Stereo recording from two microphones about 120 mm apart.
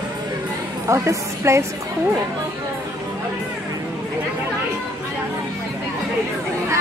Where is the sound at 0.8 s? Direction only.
25° right (ahead or behind).